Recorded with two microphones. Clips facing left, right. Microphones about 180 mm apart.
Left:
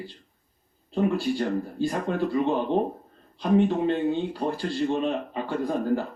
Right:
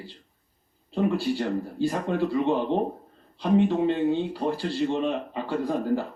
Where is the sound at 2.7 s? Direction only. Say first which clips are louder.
Left 1 dB; 15° left (ahead or behind).